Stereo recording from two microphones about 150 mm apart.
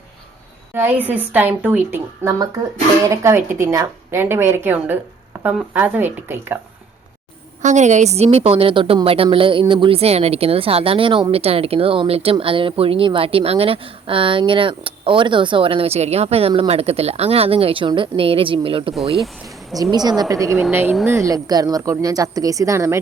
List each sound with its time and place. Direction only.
0.7 s a woman's voice: 15° right (ahead or behind)
7.6 s a woman's voice: 55° right (ahead or behind); by 18.9 s 35° right (ahead or behind)
19.7 s a woman's voice: 25° right (ahead or behind)